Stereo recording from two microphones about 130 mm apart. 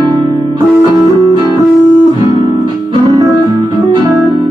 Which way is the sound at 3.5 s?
40° right (ahead or behind).